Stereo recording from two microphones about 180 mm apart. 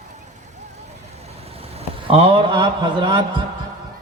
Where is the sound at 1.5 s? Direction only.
35° right (ahead or behind).